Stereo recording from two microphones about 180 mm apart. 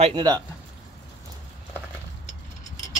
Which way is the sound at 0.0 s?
25° right (ahead or behind).